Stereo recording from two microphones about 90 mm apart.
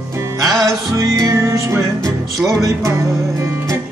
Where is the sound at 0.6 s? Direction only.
40° right (ahead or behind).